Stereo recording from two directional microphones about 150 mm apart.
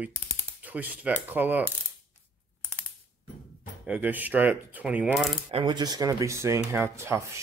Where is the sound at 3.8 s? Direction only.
10° right (ahead or behind).